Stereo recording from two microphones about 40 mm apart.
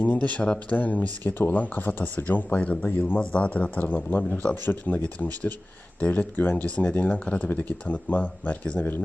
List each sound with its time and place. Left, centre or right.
0.0 s speech: left
1.3 s speech: left
1.5 s speech: left
2.6 s speech: left
3.8 s speech: left
6.3 s speech: left